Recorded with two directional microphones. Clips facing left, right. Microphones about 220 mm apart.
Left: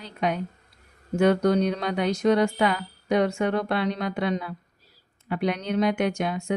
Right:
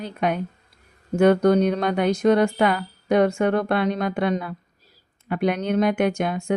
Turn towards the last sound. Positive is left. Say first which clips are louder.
# right 3 dB
turn(degrees=-50)  # may be behind; listen again after turning